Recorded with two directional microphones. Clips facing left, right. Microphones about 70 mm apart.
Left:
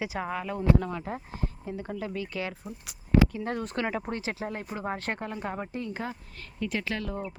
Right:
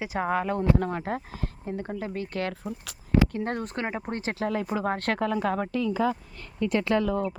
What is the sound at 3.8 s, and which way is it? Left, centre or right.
Speech, right.